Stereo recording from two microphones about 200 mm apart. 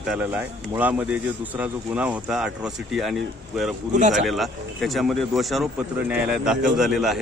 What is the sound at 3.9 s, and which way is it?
Speech, 40° right (ahead or behind).